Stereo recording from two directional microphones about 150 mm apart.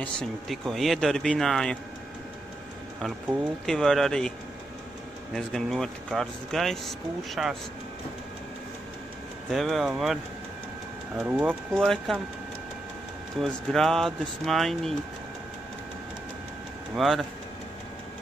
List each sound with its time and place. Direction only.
0.0 s a man's voice: 5° left (ahead or behind)
3.6 s a man's voice: centre (ahead or behind)
5.3 s a man's voice: 5° left (ahead or behind)
9.5 s a man's voice: centre (ahead or behind)
11.2 s speech: 15° right (ahead or behind)
13.4 s a man's voice: 5° left (ahead or behind)
16.9 s a man's voice: centre (ahead or behind)